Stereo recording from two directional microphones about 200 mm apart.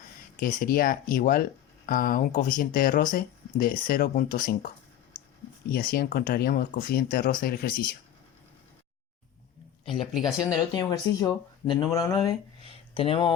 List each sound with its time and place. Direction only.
0.3 s speech: 45° left (ahead or behind)
5.7 s speech: 50° left (ahead or behind)
10.0 s speech: centre (ahead or behind)
10.4 s speech: 20° left (ahead or behind)